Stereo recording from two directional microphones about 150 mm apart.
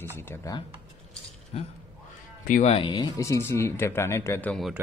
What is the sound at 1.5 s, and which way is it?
Speech, 45° left (ahead or behind).